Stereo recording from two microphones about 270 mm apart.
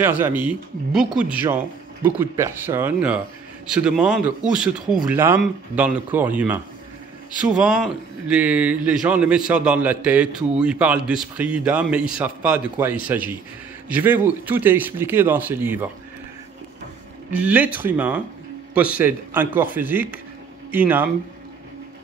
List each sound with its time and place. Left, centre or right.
0.0 s speech: centre
17.3 s speech: centre